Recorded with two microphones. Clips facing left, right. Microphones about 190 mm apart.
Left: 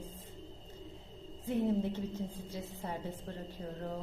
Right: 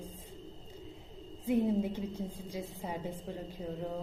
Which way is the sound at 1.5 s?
10° right (ahead or behind).